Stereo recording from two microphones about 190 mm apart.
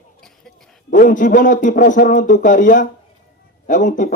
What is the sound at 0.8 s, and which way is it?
Speech, 45° left (ahead or behind).